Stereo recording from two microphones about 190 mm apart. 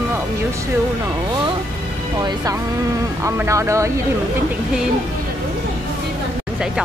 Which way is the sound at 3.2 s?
15° right (ahead or behind).